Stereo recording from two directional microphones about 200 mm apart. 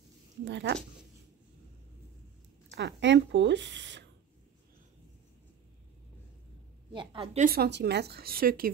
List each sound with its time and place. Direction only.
0.5 s speech: 60° right (ahead or behind)
2.7 s speech: 60° right (ahead or behind)
6.9 s a woman's voice: 25° right (ahead or behind)
7.3 s speech: 50° right (ahead or behind)